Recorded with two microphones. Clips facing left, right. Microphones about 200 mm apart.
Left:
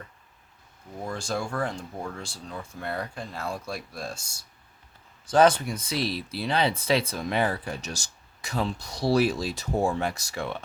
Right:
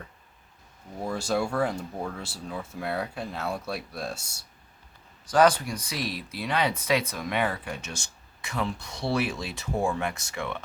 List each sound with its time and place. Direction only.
1.0 s speech: 5° right (ahead or behind)
5.3 s speech: 25° left (ahead or behind)